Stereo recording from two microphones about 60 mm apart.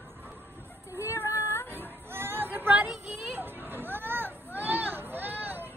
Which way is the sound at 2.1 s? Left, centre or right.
Right.